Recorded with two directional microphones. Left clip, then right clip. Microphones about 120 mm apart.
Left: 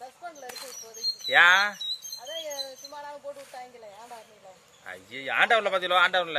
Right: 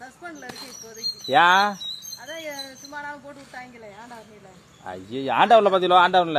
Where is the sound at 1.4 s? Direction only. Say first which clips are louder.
Right 2 dB; 35° left (ahead or behind).